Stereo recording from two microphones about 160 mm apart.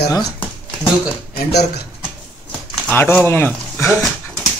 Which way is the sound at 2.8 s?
10° left (ahead or behind).